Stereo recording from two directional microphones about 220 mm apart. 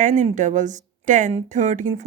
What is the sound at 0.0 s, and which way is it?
Speech, 35° right (ahead or behind).